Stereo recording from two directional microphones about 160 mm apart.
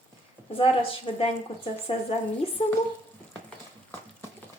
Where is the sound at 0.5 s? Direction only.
35° left (ahead or behind).